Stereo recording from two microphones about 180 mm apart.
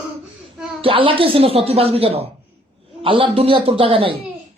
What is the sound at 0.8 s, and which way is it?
A child's voice, 30° right (ahead or behind).